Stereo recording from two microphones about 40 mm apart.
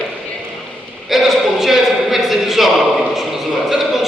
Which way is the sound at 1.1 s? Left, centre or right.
Centre.